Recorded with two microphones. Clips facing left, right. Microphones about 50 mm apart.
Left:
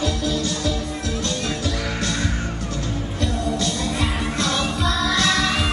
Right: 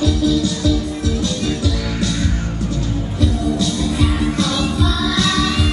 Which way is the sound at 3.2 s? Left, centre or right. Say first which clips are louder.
Right 5 dB; left.